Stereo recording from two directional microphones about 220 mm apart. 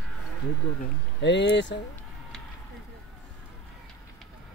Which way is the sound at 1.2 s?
55° left (ahead or behind).